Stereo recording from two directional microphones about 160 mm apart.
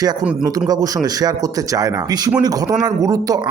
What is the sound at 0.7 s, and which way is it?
Speech, 25° right (ahead or behind).